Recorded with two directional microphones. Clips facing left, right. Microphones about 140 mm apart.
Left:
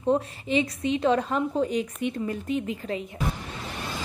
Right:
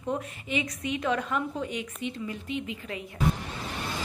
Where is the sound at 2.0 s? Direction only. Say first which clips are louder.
Left 6 dB; 50° left (ahead or behind).